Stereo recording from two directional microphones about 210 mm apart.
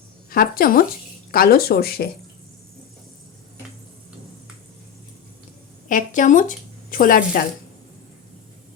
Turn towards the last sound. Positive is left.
turn(degrees=40)  # may be behind; listen again after turning